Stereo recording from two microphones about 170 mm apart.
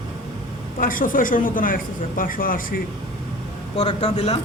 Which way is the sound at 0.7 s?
55° left (ahead or behind).